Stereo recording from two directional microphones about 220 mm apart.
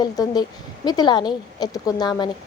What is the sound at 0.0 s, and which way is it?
A woman's voice, 20° left (ahead or behind).